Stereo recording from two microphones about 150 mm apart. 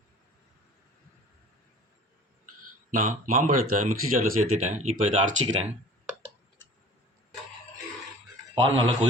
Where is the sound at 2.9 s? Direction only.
60° right (ahead or behind).